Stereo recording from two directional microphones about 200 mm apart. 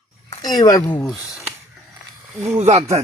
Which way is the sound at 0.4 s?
20° left (ahead or behind).